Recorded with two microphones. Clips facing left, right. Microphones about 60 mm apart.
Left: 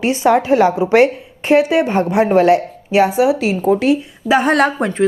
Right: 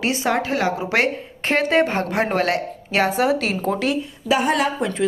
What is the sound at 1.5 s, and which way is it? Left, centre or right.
A woman's voice, centre.